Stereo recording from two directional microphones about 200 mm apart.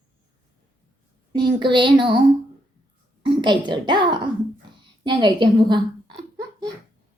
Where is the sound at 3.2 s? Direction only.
25° right (ahead or behind).